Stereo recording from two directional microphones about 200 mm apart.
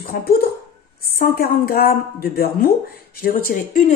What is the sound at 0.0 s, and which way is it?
Speech, 50° left (ahead or behind).